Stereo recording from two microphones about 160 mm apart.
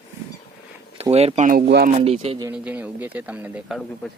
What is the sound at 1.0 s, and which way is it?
Speech, 40° right (ahead or behind).